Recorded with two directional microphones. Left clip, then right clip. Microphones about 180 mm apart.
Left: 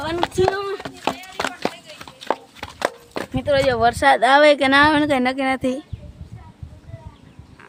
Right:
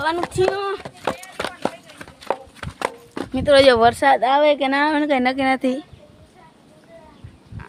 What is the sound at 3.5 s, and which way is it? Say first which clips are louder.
Speech: right 6 dB; 65° right (ahead or behind).